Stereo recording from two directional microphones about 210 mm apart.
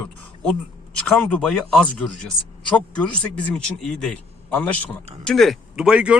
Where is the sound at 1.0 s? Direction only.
5° left (ahead or behind).